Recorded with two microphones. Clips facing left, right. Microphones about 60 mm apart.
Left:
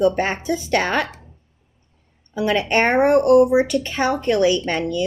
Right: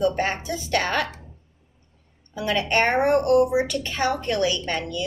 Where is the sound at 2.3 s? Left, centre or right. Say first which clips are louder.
Left 4 dB; left.